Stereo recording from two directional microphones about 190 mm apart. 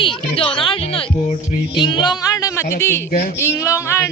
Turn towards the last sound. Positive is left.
turn(degrees=15)  # may be behind; listen again after turning